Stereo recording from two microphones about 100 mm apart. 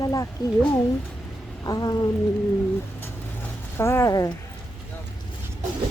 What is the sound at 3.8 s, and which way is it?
Speech, 25° left (ahead or behind).